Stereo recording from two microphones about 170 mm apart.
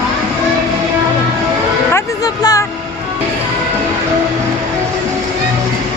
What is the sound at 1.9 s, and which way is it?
Music, 20° left (ahead or behind).